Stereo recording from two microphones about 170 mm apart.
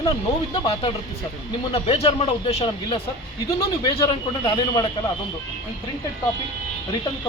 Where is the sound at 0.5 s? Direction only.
30° left (ahead or behind).